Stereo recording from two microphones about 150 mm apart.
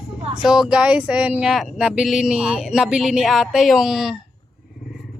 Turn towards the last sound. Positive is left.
turn(degrees=-5)  # may be behind; listen again after turning